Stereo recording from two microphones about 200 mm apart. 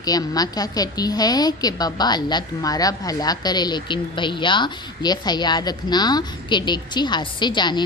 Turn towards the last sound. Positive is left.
turn(degrees=20)  # may be behind; listen again after turning